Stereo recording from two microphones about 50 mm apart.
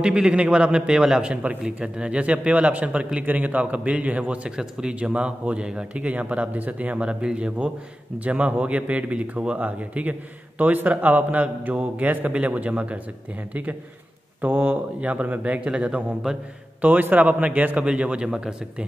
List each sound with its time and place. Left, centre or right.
0.0 s a man's voice: centre
4.6 s a man's voice: centre
4.9 s speech: right
16.3 s a man's voice: centre
16.8 s a man's voice: right; by 18.9 s centre